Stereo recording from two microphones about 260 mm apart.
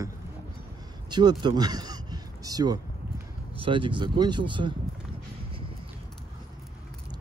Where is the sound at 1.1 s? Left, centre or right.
Centre.